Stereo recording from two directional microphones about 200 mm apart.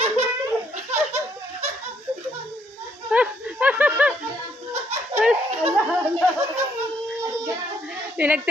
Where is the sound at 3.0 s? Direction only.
5° right (ahead or behind).